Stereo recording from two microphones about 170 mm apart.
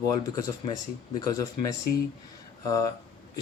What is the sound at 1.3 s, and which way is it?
Speech, 20° left (ahead or behind).